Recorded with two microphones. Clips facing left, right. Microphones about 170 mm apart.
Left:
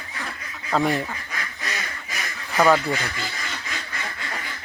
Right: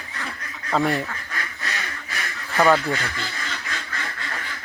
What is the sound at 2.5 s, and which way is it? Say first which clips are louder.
Speech: even; centre (ahead or behind).